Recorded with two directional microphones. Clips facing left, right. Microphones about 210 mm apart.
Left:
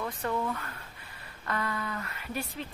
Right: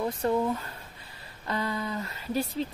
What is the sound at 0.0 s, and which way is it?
Speech, 25° right (ahead or behind).